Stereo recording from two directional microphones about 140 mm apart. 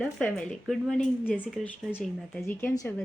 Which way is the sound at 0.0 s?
5° left (ahead or behind).